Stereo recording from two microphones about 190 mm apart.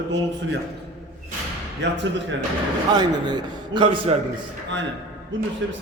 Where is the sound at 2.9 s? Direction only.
20° right (ahead or behind).